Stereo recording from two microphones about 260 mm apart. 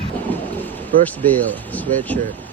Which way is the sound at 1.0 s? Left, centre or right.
Centre.